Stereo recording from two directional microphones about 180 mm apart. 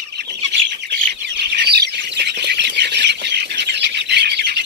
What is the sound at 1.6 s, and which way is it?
Squawk, 65° right (ahead or behind).